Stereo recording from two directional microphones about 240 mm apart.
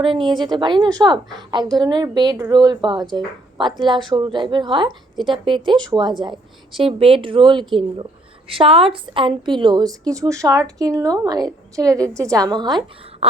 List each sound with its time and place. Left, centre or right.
0.0 s a woman's voice: right